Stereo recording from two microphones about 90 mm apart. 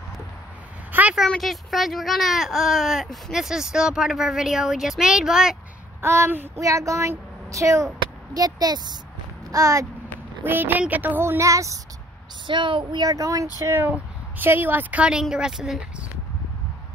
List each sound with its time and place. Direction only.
0.9 s a sound: 20° right (ahead or behind)
1.4 s speech: centre (ahead or behind)
5.9 s speech: 25° right (ahead or behind); by 8.9 s 50° right (ahead or behind)
9.5 s speech: 40° right (ahead or behind)
10.4 s speech: 20° right (ahead or behind)
12.4 s a woman's voice: 65° right (ahead or behind)
13.0 s speech: 40° right (ahead or behind)
13.8 s speech: 20° right (ahead or behind)